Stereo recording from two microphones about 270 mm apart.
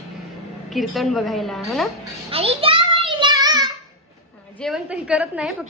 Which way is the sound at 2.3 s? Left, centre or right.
Right.